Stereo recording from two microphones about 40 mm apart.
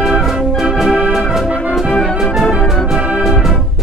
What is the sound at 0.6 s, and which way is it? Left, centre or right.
Organ, centre.